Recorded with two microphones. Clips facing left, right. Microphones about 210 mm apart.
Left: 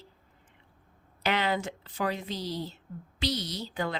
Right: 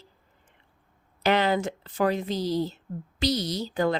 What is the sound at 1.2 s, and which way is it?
Speech, 45° right (ahead or behind).